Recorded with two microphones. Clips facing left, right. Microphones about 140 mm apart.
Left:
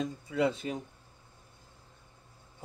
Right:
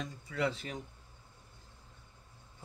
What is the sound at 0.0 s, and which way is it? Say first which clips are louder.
Speech: left 5 dB; 20° left (ahead or behind).